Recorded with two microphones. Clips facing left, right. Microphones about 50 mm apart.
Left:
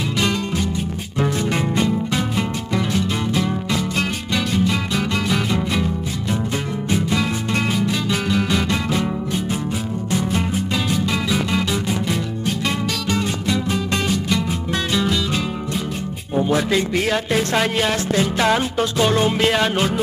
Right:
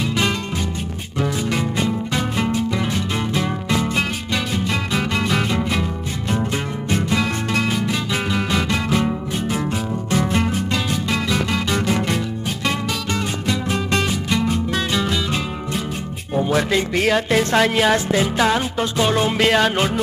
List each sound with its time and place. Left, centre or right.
1.2 s music: centre
2.3 s music: centre
4.6 s music: centre
7.2 s music: centre
10.7 s music: centre
13.7 s music: centre
16.3 s music: centre
19.5 s music: centre